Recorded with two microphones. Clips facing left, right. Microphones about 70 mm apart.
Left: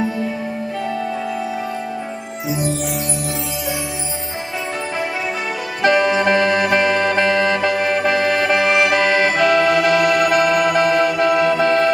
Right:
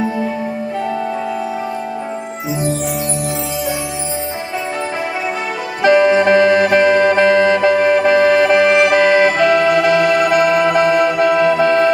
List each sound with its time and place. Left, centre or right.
5.8 s music: centre